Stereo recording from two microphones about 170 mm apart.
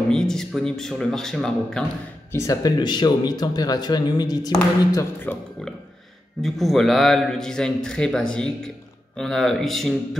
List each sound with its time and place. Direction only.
0.1 s a man's voice: 5° left (ahead or behind)
2.3 s speech: 20° left (ahead or behind)
4.9 s a man's voice: 10° left (ahead or behind)